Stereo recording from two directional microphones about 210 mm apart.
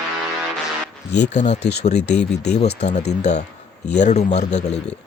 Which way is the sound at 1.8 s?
30° left (ahead or behind).